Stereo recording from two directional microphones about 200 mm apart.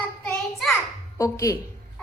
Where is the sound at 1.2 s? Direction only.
15° left (ahead or behind).